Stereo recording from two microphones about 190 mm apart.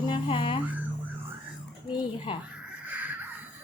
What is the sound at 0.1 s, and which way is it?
Music, 30° left (ahead or behind).